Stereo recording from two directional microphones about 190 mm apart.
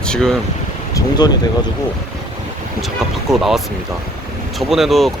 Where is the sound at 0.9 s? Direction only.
20° left (ahead or behind).